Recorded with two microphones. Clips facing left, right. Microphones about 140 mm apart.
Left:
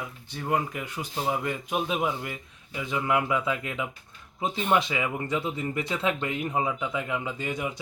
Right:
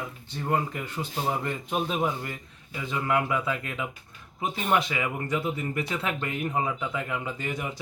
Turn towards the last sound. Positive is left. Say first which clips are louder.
# left 1 dB
turn(degrees=20)  # may be behind; listen again after turning